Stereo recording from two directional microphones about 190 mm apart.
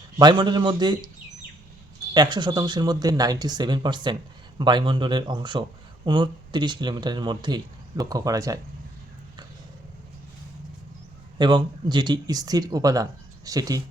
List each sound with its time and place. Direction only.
0.2 s speech: 25° right (ahead or behind)
2.1 s speech: 20° right (ahead or behind)
11.3 s speech: 25° right (ahead or behind)